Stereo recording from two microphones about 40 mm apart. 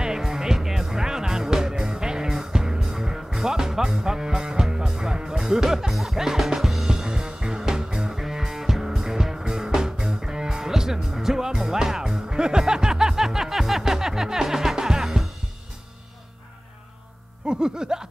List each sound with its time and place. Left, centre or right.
0.0 s music: centre
17.5 s music: centre